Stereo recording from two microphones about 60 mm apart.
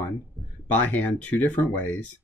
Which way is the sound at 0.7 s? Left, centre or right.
Left.